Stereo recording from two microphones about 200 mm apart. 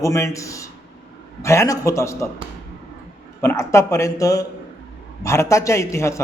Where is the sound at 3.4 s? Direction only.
15° left (ahead or behind).